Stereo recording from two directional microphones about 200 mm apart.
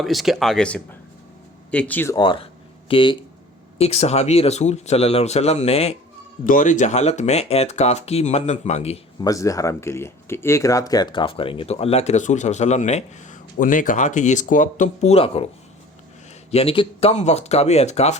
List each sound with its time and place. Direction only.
0.0 s speech: centre (ahead or behind)
2.1 s speech: 25° left (ahead or behind)
6.4 s speech: 40° left (ahead or behind)
9.2 s speech: 15° left (ahead or behind)
16.5 s speech: 30° left (ahead or behind)